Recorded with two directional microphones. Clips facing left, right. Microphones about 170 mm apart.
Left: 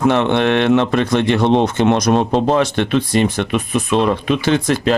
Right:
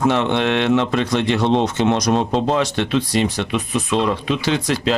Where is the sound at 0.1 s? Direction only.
55° left (ahead or behind).